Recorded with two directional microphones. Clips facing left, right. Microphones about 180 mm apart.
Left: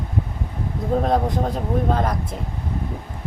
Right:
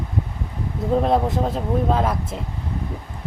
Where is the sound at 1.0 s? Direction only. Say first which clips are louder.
Right 1 dB; centre (ahead or behind).